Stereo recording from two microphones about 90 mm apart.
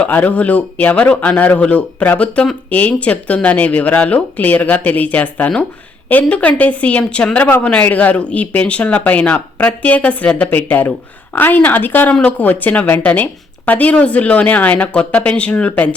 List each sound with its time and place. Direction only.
0.0 s speech: 15° left (ahead or behind)